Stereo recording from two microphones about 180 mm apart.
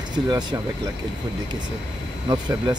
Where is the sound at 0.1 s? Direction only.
25° right (ahead or behind).